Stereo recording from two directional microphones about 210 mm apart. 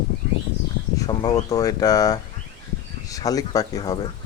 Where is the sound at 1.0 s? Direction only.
20° left (ahead or behind).